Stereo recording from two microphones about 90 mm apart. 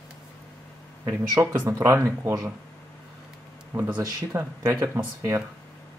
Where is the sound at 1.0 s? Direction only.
30° right (ahead or behind).